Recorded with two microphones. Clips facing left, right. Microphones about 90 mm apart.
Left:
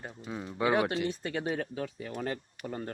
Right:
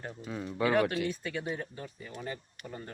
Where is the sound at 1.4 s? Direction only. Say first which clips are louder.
Left 4 dB; 85° left; by 2.8 s 65° left (ahead or behind).